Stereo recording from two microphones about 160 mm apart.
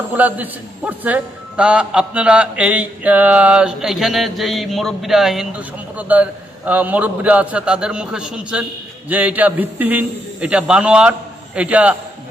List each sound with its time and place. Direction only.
0.1 s a man's voice: 10° right (ahead or behind)